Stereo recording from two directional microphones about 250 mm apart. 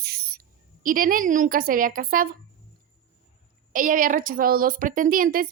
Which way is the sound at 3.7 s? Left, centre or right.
Right.